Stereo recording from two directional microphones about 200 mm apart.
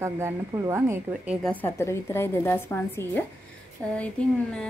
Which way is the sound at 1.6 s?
10° left (ahead or behind).